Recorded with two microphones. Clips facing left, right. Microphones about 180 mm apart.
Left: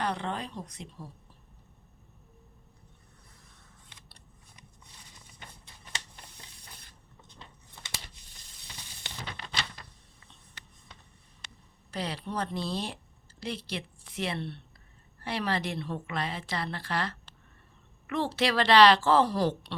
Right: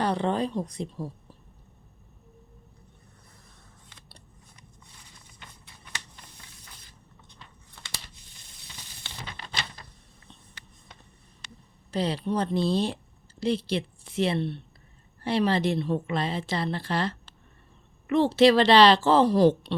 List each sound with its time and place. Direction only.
0.0 s speech: 35° right (ahead or behind)
7.3 s a sound: 20° left (ahead or behind)
11.9 s a woman's voice: 25° right (ahead or behind)